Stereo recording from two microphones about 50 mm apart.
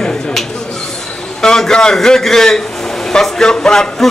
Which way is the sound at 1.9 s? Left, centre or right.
Centre.